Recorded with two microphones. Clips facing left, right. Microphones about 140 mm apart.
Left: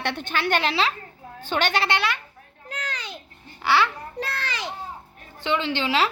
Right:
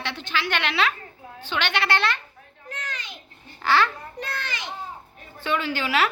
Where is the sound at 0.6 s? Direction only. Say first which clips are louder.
Left 1 dB; 30° left (ahead or behind).